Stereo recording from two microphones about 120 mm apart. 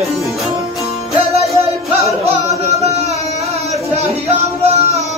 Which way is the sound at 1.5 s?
60° right (ahead or behind).